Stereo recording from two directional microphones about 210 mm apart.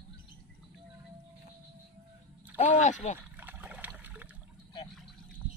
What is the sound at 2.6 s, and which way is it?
Speech, 35° left (ahead or behind).